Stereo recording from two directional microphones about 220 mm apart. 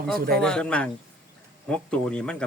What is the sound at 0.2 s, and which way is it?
Speech, 40° right (ahead or behind).